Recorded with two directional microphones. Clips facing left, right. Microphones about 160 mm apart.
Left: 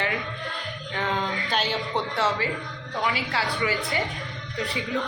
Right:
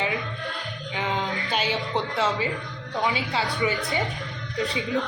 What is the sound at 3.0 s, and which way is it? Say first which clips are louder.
A woman's voice: right 1 dB; 20° right (ahead or behind).